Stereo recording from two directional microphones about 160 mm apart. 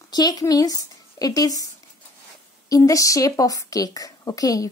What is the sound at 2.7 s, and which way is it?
A woman's voice, 20° left (ahead or behind).